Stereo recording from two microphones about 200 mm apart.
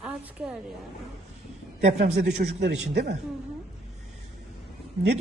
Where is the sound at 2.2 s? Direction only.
55° right (ahead or behind).